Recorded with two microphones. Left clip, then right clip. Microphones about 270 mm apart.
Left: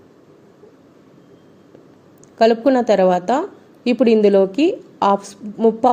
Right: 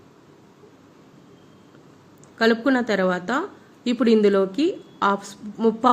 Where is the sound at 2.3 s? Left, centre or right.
Centre.